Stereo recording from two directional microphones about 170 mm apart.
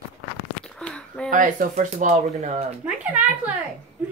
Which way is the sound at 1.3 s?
50° right (ahead or behind).